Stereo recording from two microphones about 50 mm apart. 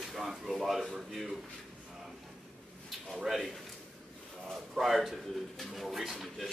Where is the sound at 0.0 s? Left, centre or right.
Centre.